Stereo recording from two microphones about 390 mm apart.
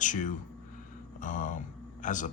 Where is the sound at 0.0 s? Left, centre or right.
Centre.